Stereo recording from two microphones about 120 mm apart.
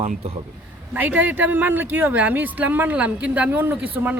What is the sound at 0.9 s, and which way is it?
Speech, 15° right (ahead or behind).